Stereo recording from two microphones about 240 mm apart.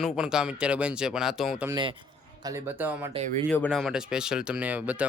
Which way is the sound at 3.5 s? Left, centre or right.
Centre.